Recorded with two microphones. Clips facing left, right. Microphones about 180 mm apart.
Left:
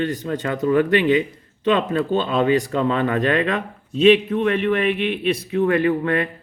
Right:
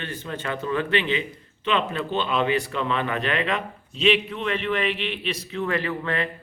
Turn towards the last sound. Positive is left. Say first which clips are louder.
# left 8 dB
turn(degrees=50)  # may be behind; listen again after turning